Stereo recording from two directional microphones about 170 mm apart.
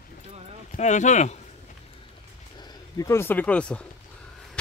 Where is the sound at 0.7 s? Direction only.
45° left (ahead or behind).